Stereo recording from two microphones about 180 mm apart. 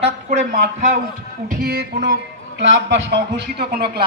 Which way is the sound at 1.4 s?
60° right (ahead or behind).